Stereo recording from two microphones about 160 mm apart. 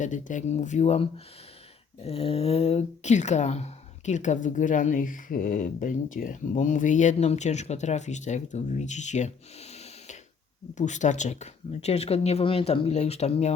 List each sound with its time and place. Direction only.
0.0 s speech: 50° left (ahead or behind)